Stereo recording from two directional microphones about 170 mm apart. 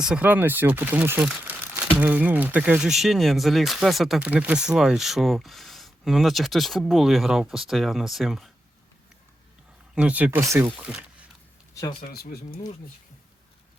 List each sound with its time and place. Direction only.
0.0 s speech: 5° right (ahead or behind)
9.9 s speech: 5° right (ahead or behind)
11.7 s a sound: 20° left (ahead or behind)
12.0 s speech: 65° left (ahead or behind)